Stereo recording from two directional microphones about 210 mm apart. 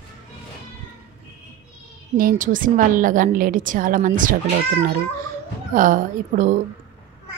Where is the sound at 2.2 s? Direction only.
40° right (ahead or behind).